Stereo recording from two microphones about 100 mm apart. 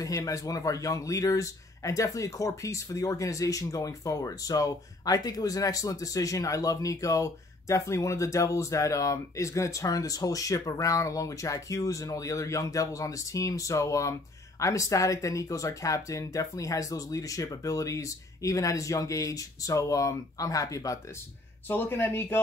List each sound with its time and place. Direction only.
0.0 s speech: 35° left (ahead or behind)
21.6 s speech: 20° left (ahead or behind)